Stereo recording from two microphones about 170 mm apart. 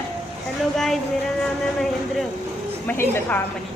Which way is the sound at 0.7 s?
Centre (ahead or behind).